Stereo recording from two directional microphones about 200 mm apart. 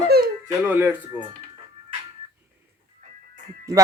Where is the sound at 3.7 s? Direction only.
15° right (ahead or behind).